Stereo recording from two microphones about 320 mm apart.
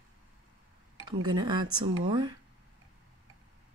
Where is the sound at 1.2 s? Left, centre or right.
Centre.